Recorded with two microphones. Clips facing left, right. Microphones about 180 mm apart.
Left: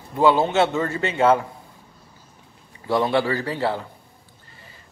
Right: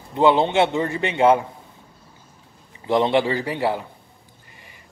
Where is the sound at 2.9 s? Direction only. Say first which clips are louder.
Right 2 dB; 20° right (ahead or behind).